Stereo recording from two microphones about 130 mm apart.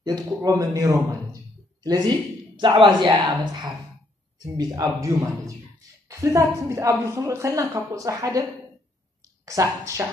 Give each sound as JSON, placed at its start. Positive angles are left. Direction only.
{"t": 0.0, "sound": "a woman's voice", "side_deg": -30}
{"t": 9.5, "sound": "a woman's voice", "side_deg": -25}